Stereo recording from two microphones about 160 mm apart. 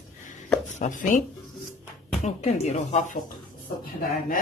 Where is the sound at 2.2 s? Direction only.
45° left (ahead or behind).